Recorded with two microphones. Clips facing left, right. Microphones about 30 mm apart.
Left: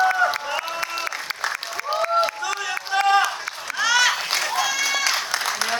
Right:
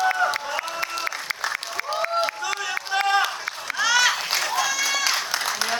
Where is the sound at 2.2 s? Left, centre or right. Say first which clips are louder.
Left 2 dB; centre.